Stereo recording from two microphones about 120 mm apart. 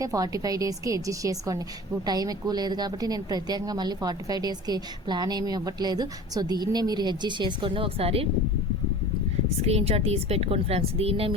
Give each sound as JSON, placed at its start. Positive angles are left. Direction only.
{"t": 0.0, "sound": "a woman's voice", "side_deg": -30}
{"t": 9.6, "sound": "a woman's voice", "side_deg": -60}